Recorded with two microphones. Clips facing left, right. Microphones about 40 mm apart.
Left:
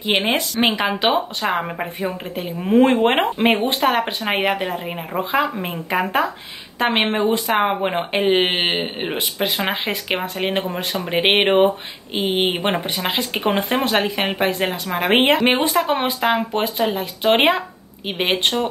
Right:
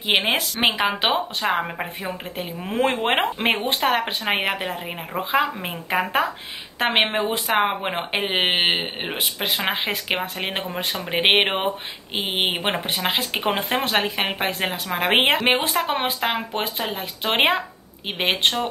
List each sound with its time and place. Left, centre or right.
0.0 s a woman's voice: centre